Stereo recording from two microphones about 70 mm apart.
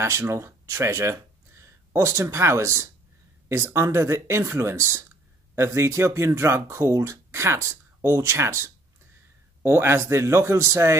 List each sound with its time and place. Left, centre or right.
0.0 s speech: right